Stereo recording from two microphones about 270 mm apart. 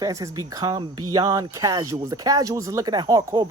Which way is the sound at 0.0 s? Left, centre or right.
Centre.